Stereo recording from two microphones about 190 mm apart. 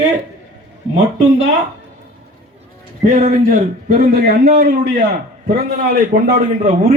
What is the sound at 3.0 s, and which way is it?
A man's voice, 40° right (ahead or behind).